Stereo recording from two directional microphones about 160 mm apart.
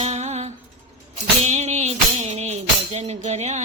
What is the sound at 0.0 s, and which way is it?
Music, 45° right (ahead or behind).